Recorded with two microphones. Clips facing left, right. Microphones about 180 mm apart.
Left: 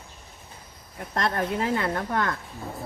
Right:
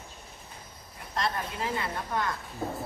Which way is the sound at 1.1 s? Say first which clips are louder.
Left 6 dB; 55° left (ahead or behind).